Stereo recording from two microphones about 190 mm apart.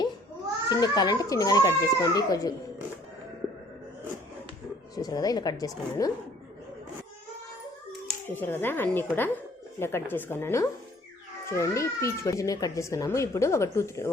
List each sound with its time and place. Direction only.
0.7 s speech: 20° left (ahead or behind)
4.9 s speech: 20° left (ahead or behind)
8.3 s speech: 10° left (ahead or behind)